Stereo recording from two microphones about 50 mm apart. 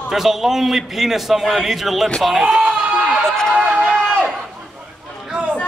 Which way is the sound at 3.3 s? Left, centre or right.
Centre.